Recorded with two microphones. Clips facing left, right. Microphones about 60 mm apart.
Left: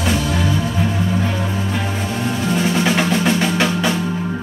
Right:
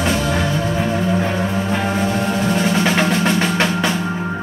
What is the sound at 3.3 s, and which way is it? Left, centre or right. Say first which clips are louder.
Drum: even; centre.